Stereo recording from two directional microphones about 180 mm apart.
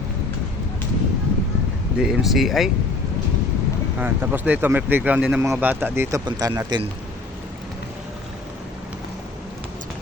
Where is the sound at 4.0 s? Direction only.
10° right (ahead or behind).